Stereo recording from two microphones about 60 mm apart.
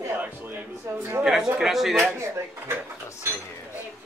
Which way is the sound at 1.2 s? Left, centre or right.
Centre.